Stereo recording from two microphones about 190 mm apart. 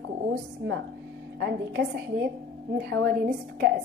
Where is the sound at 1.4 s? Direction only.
65° right (ahead or behind).